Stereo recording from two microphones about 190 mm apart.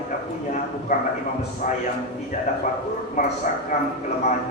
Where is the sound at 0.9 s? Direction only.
40° left (ahead or behind).